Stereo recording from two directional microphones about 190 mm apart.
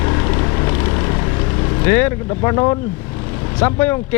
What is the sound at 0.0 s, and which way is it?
Vehicle, 20° left (ahead or behind).